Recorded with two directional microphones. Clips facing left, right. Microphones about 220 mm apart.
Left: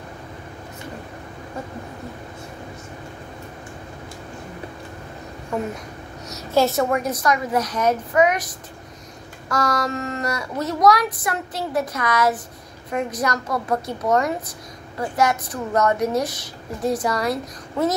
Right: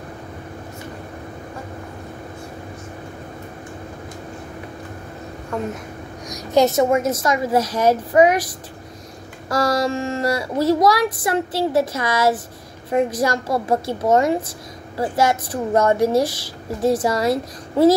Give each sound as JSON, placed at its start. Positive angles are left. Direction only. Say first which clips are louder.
{"t": 5.5, "sound": "speech", "louder": "even", "side_deg": 5}
{"t": 6.2, "sound": "a woman's voice", "louder": "right 3 dB", "side_deg": -15}
{"t": 9.5, "sound": "a woman's voice", "louder": "right 4 dB", "side_deg": -30}